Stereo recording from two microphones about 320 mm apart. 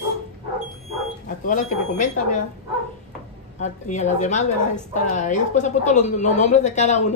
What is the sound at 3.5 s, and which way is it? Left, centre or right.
A woman's voice, left.